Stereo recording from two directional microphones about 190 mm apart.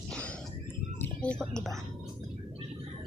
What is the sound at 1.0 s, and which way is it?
Speech, 5° left (ahead or behind).